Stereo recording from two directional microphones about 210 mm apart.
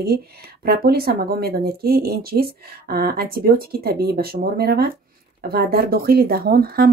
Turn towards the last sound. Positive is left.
turn(degrees=-45)  # may be behind; listen again after turning